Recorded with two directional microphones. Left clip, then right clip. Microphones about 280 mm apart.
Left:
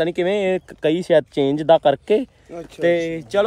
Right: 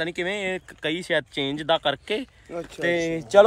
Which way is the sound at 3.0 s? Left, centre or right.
Centre.